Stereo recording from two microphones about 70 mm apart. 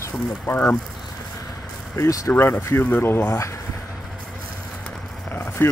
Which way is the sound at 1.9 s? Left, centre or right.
Left.